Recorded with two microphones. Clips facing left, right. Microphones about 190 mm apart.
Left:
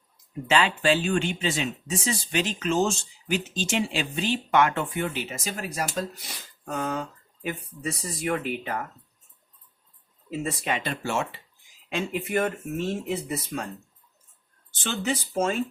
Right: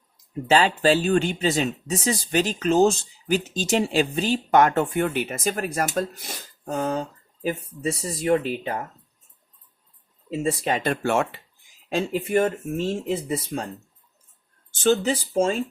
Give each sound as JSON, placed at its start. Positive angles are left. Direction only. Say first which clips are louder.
{"t": 0.4, "sound": "speech", "louder": "right 4 dB", "side_deg": -35}
{"t": 10.2, "sound": "speech", "louder": "right 5 dB", "side_deg": -30}
{"t": 10.8, "sound": "speech", "louder": "right 6 dB", "side_deg": -55}
{"t": 11.9, "sound": "speech", "louder": "right 5 dB", "side_deg": -35}
{"t": 14.8, "sound": "speech", "louder": "right 8 dB", "side_deg": -40}